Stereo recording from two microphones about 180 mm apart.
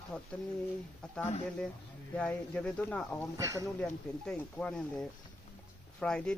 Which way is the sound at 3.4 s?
20° right (ahead or behind).